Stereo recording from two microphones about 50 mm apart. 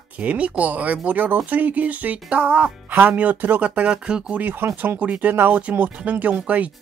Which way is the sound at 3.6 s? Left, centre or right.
Right.